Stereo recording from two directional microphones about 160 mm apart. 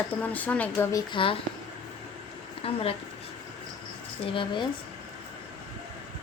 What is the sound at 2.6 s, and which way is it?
Speech, 35° left (ahead or behind).